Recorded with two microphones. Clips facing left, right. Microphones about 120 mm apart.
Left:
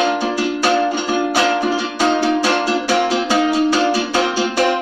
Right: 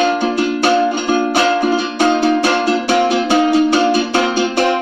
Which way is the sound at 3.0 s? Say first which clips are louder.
Right 3 dB; 55° right (ahead or behind).